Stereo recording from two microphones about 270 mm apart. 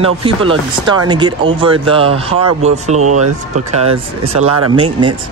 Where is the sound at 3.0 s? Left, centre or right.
Right.